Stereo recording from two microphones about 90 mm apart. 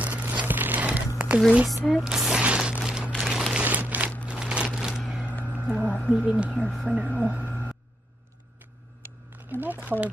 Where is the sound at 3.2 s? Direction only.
5° right (ahead or behind).